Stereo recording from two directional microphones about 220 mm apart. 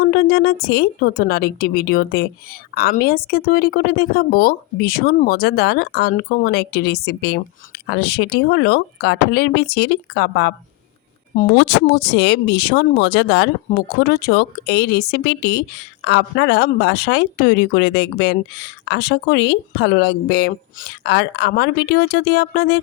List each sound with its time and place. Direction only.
0.0 s speech: 45° left (ahead or behind)
11.9 s speech: 50° left (ahead or behind)